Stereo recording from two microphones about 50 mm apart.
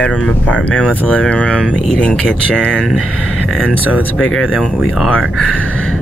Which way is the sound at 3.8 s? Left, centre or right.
Right.